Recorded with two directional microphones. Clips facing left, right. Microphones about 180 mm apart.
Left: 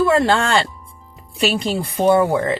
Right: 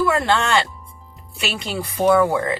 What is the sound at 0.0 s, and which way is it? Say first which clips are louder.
Speech: left 3 dB; 25° left (ahead or behind).